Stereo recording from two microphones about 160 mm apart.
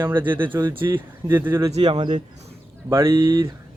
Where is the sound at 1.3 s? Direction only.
15° right (ahead or behind).